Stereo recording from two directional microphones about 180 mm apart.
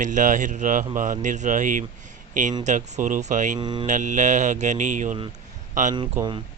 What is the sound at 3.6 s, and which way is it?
Speech, 25° right (ahead or behind).